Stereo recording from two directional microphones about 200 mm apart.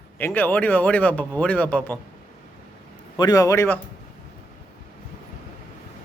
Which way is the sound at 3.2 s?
20° left (ahead or behind).